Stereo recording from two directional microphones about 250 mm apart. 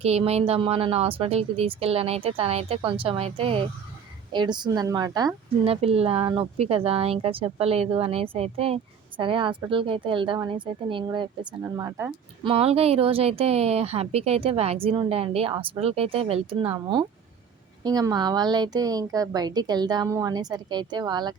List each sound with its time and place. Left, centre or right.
0.0 s a woman's voice: right
12.5 s a woman's voice: right